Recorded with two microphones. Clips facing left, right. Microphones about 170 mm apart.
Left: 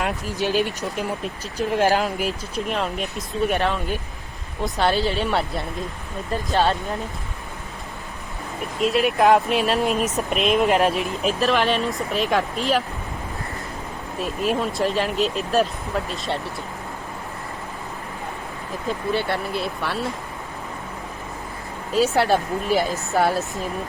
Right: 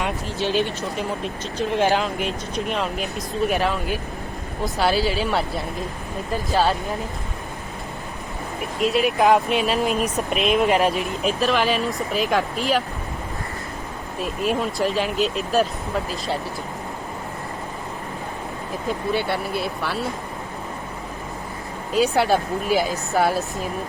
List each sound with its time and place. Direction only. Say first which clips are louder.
0.0 s speech: even; 5° left (ahead or behind)
8.8 s speech: even; centre (ahead or behind)
14.2 s speech: even; centre (ahead or behind)
19.1 s speech: even; centre (ahead or behind)
21.9 s speech: even; centre (ahead or behind)